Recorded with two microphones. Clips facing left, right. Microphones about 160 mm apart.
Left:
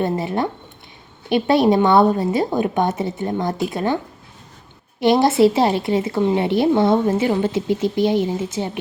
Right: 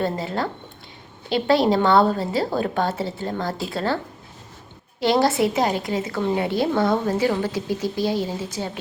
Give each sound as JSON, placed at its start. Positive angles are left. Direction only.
{"t": 0.0, "sound": "a woman's voice", "side_deg": 20}